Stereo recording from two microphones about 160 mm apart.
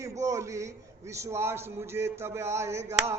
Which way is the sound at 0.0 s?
20° right (ahead or behind).